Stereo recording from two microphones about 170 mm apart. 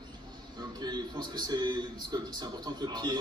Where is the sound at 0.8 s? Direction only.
25° right (ahead or behind).